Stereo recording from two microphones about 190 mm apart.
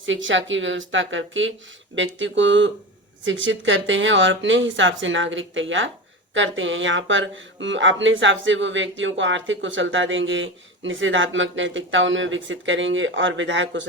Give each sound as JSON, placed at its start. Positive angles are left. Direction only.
{"t": 0.0, "sound": "speech", "side_deg": -90}
{"t": 2.0, "sound": "speech", "side_deg": -80}